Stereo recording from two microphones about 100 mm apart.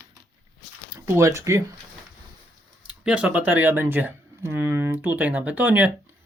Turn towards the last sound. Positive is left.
turn(degrees=-15)  # may be behind; listen again after turning